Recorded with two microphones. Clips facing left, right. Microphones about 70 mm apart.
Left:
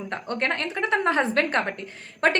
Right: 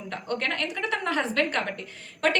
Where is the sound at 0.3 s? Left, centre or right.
Left.